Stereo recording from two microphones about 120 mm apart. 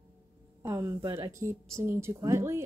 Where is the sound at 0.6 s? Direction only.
25° right (ahead or behind).